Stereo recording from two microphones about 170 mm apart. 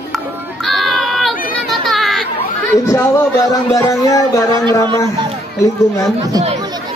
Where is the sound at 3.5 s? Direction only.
20° left (ahead or behind).